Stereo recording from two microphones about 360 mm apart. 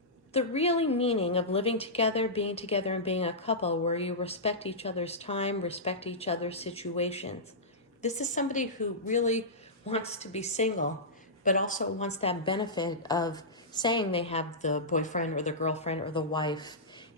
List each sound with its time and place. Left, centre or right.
0.3 s a woman's voice: centre